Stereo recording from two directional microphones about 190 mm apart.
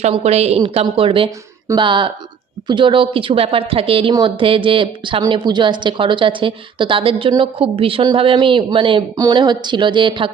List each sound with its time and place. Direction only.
0.0 s a woman's voice: 35° right (ahead or behind)